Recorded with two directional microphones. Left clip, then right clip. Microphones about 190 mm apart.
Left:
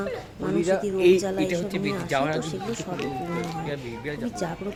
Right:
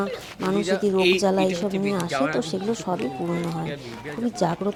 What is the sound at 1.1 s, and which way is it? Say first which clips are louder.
A woman's voice: right 2 dB; 20° right (ahead or behind).